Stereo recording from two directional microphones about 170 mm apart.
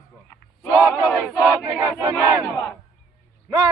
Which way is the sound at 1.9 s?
10° left (ahead or behind).